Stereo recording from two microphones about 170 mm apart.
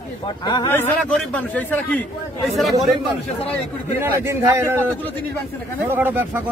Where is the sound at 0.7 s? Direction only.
10° left (ahead or behind).